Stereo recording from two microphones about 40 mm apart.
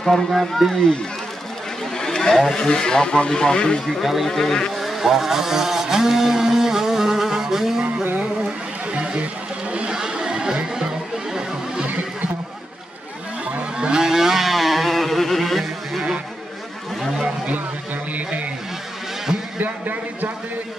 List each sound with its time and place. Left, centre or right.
0.0 s speech: centre
2.0 s vehicle: centre
2.5 s speech: centre
4.0 s speech: centre
4.3 s speech: centre
4.7 s vehicle: centre
8.9 s a sound: right
9.7 s chatter: right
9.9 s chatter: centre
11.8 s neigh: right
13.7 s vehicle: centre
19.6 s a sound: right